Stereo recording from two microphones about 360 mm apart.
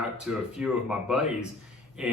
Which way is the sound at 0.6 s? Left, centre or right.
Centre.